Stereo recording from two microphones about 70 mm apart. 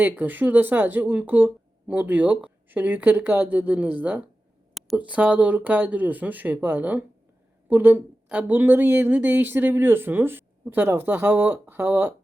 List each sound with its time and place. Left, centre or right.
0.0 s speech: right
8.3 s speech: centre
8.5 s speech: right